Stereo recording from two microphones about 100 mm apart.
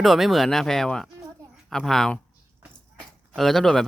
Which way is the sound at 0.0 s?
Centre (ahead or behind).